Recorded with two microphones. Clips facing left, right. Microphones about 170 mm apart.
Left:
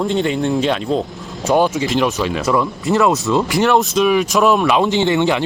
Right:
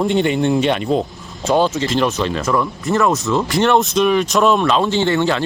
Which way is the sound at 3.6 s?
5° left (ahead or behind).